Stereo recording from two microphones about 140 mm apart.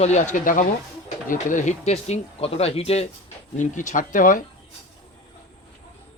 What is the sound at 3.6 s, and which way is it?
Speech, 65° left (ahead or behind).